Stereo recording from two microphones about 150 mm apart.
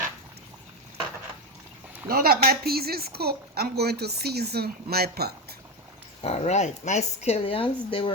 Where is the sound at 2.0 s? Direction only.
90° right.